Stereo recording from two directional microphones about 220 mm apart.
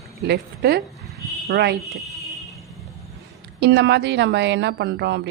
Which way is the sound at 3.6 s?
50° right (ahead or behind).